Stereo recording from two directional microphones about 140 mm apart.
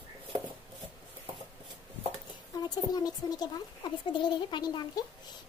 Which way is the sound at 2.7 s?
30° left (ahead or behind).